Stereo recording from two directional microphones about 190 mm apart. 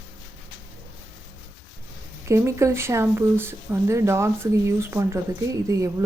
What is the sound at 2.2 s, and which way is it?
Speech, 15° right (ahead or behind).